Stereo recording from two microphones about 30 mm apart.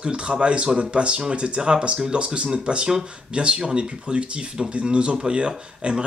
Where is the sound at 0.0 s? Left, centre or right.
Right.